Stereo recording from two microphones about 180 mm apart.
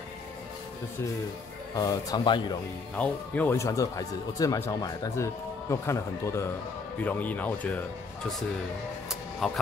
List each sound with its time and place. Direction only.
1.8 s a man's voice: 20° left (ahead or behind)
3.0 s speech: 10° left (ahead or behind)